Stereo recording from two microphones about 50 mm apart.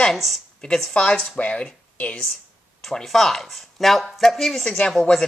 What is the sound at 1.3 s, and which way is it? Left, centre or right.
Speech, left.